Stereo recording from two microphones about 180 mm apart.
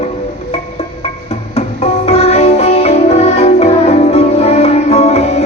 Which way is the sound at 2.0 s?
35° left (ahead or behind).